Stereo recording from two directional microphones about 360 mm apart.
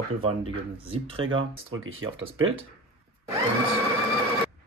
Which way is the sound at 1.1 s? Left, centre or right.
Right.